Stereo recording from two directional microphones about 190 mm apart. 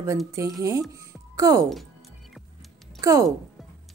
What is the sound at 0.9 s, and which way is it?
Music, 15° right (ahead or behind).